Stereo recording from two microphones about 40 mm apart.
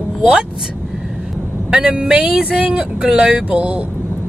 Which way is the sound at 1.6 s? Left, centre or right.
Right.